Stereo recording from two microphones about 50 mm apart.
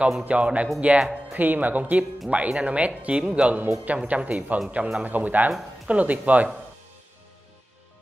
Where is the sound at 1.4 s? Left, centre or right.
Right.